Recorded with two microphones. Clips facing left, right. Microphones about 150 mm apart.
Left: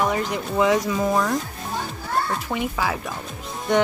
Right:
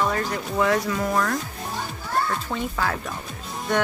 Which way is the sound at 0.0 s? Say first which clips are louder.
Left 2 dB; 15° left (ahead or behind).